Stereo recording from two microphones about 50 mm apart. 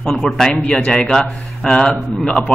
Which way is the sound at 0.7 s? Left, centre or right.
Left.